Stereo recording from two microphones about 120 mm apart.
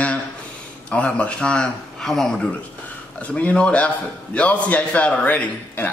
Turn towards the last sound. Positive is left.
turn(degrees=10)  # may be behind; listen again after turning